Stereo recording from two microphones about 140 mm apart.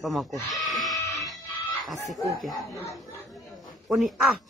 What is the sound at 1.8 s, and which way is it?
Speech, centre (ahead or behind).